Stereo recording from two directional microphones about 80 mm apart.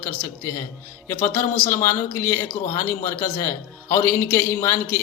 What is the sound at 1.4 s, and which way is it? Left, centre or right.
A man's voice, left.